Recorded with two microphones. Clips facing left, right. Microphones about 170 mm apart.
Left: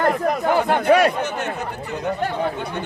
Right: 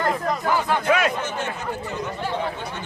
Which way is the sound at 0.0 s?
55° left (ahead or behind).